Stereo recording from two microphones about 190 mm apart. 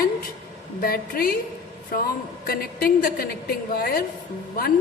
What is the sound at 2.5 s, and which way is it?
A woman's voice, 50° left (ahead or behind).